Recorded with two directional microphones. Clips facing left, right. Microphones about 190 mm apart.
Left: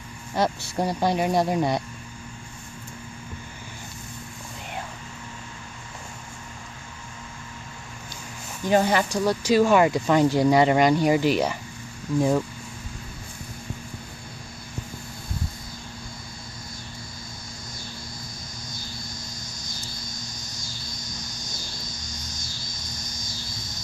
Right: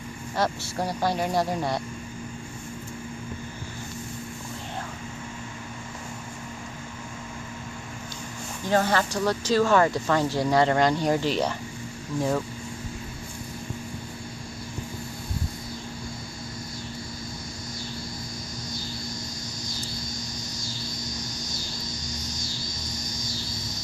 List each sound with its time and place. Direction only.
0.4 s speech: 20° left (ahead or behind)
8.6 s speech: 15° left (ahead or behind)